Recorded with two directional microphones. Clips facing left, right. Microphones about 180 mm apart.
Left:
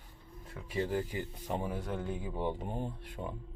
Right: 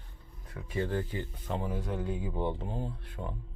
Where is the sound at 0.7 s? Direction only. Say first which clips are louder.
Right 1 dB; 10° left (ahead or behind).